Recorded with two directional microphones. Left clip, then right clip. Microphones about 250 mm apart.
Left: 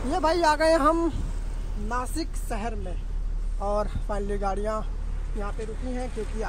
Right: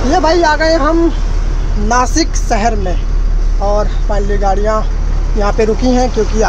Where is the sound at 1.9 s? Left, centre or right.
Centre.